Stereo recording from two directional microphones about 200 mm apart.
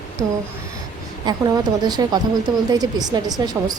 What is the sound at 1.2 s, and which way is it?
A woman's voice, 20° right (ahead or behind).